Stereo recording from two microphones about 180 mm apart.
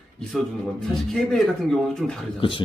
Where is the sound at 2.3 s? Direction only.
30° left (ahead or behind).